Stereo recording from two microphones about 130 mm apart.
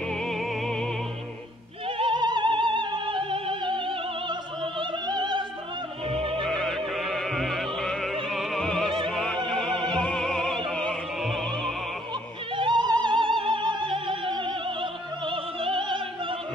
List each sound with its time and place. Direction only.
0.2 s music: 5° left (ahead or behind)
2.0 s music: 40° right (ahead or behind)
6.4 s opera: centre (ahead or behind)
9.5 s music: 5° left (ahead or behind)
9.9 s opera: 5° left (ahead or behind)
10.7 s music: 5° left (ahead or behind)
12.5 s opera: 40° right (ahead or behind)